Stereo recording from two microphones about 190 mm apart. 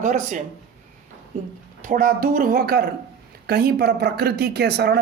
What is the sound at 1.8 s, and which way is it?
Speech, 50° right (ahead or behind).